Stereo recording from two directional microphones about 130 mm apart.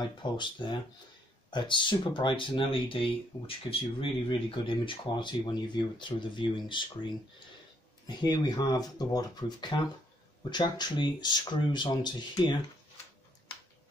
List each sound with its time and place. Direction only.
0.0 s speech: 35° left (ahead or behind)
8.2 s speech: 35° left (ahead or behind)